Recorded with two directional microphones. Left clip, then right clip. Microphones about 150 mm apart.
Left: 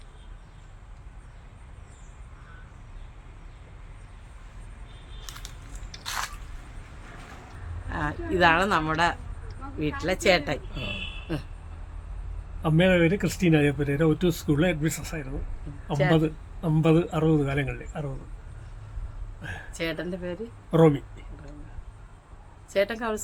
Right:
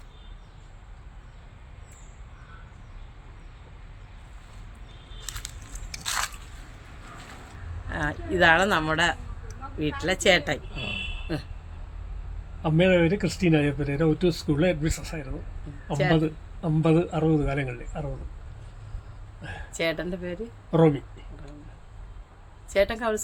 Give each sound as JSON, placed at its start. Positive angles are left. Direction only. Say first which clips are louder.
{"t": 5.3, "sound": "a sound", "louder": "right 4 dB", "side_deg": -90}
{"t": 6.0, "sound": "biting", "louder": "right 3 dB", "side_deg": -85}
{"t": 7.9, "sound": "speech", "louder": "even", "side_deg": 0}
{"t": 12.6, "sound": "speech", "louder": "even", "side_deg": 25}
{"t": 19.4, "sound": "a sound", "louder": "left 2 dB", "side_deg": 20}
{"t": 19.7, "sound": "speech", "louder": "right 4 dB", "side_deg": 0}
{"t": 20.7, "sound": "speech", "louder": "left 1 dB", "side_deg": 20}
{"t": 22.7, "sound": "speech", "louder": "right 2 dB", "side_deg": -5}